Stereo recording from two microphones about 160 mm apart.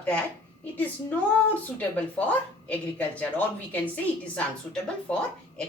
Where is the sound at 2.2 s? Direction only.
10° left (ahead or behind).